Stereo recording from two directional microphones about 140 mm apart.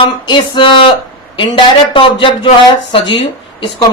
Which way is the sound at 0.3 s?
35° left (ahead or behind).